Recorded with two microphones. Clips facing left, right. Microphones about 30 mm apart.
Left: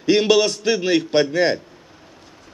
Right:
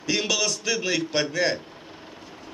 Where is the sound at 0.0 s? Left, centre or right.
Left.